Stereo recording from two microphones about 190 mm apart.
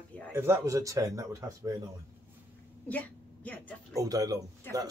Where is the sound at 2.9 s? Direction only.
10° left (ahead or behind).